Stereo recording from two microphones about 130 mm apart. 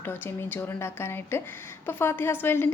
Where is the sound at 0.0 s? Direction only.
15° left (ahead or behind).